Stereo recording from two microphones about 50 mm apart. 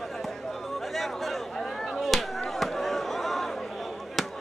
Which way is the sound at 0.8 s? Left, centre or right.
Centre.